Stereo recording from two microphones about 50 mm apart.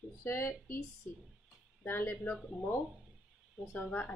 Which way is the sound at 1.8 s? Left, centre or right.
Left.